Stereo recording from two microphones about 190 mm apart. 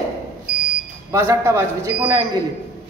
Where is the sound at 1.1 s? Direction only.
15° right (ahead or behind).